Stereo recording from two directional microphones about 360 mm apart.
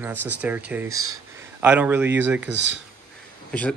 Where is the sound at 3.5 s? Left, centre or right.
Centre.